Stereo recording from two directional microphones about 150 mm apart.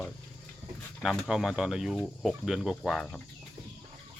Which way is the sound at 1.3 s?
5° right (ahead or behind).